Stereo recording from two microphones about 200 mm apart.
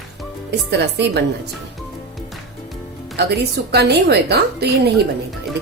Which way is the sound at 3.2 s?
55° right (ahead or behind).